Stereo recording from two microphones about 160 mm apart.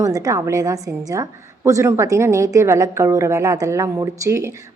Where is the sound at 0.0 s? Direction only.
20° right (ahead or behind).